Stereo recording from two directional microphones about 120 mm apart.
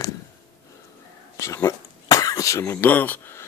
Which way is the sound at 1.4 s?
25° left (ahead or behind).